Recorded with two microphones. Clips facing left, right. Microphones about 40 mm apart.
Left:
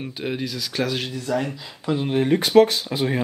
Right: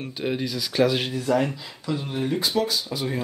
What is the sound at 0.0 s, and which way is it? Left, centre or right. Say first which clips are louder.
Speech: even; centre.